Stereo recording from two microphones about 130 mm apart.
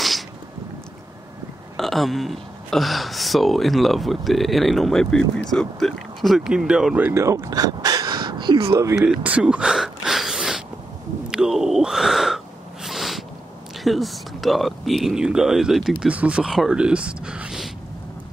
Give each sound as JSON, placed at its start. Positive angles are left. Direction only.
{"t": 1.8, "sound": "speech", "side_deg": 0}
{"t": 7.1, "sound": "a sound", "side_deg": -20}
{"t": 9.0, "sound": "a sound", "side_deg": -10}
{"t": 11.2, "sound": "speech", "side_deg": -5}
{"t": 12.8, "sound": "cat", "side_deg": 0}
{"t": 13.8, "sound": "speech", "side_deg": 0}